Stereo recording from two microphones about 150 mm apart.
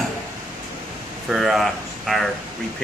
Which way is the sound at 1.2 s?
Centre (ahead or behind).